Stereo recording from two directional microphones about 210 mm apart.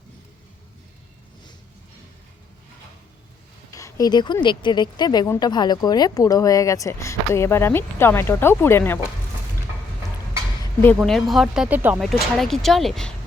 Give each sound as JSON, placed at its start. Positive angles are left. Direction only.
{"t": 3.7, "sound": "a sound", "side_deg": 15}
{"t": 4.4, "sound": "speech", "side_deg": 20}
{"t": 10.8, "sound": "speech", "side_deg": 0}